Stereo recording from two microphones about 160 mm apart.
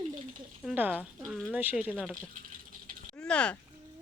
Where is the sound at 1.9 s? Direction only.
5° left (ahead or behind).